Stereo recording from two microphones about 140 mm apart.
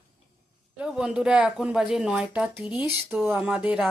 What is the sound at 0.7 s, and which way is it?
Speech, 5° right (ahead or behind).